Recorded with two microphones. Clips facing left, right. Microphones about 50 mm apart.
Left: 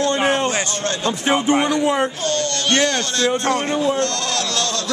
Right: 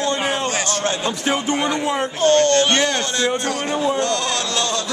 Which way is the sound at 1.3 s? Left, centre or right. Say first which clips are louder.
Left 5 dB; centre.